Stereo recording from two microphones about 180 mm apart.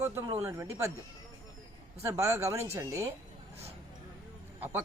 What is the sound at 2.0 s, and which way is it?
Speech, 15° right (ahead or behind).